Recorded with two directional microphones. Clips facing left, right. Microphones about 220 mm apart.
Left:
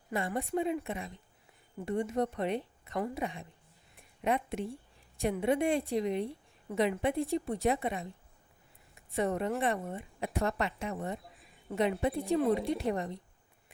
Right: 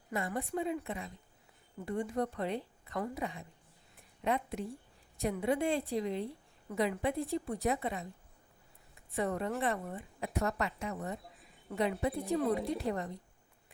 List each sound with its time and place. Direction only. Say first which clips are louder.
0.1 s a woman's voice: left 3 dB; 30° left (ahead or behind)
9.1 s a woman's voice: left 3 dB; 20° left (ahead or behind)